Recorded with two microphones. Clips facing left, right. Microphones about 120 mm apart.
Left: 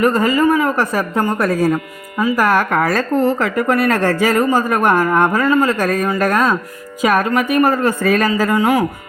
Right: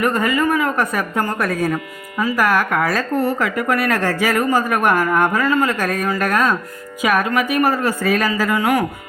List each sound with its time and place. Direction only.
0.0 s speech: 30° left (ahead or behind)
4.4 s speech: 30° left (ahead or behind)
5.8 s speech: 40° left (ahead or behind)
8.4 s speech: 35° left (ahead or behind)